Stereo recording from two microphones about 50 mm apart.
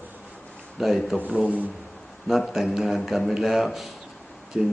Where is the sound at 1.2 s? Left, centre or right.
Right.